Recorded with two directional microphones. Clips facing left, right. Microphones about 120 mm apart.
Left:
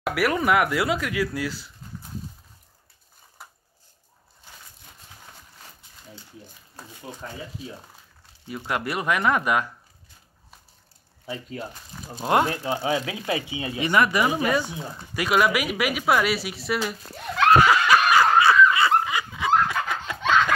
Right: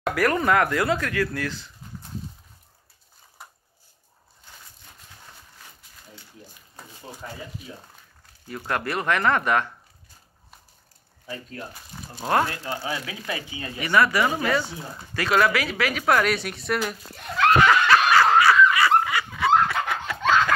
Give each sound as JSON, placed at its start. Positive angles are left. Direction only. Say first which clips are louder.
{"t": 0.0, "sound": "speech", "louder": "right 1 dB", "side_deg": 5}
{"t": 3.4, "sound": "a sound", "louder": "even", "side_deg": 0}
{"t": 8.5, "sound": "speech", "louder": "even", "side_deg": 15}
{"t": 12.3, "sound": "speech", "louder": "left 2 dB", "side_deg": 20}
{"t": 17.6, "sound": "snicker", "louder": "even", "side_deg": 15}